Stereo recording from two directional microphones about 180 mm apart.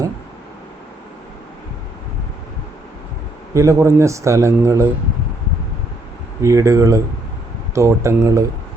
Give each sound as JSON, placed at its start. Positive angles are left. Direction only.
{"t": 3.5, "sound": "speech", "side_deg": -15}
{"t": 6.4, "sound": "speech", "side_deg": -15}